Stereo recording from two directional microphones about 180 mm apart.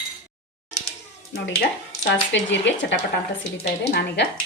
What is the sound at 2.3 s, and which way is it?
Speech, 85° left.